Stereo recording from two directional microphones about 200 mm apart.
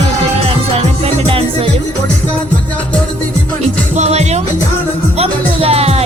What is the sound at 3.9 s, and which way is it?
Music, 35° right (ahead or behind).